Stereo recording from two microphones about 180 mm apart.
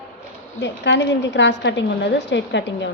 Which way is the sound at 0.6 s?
75° left (ahead or behind).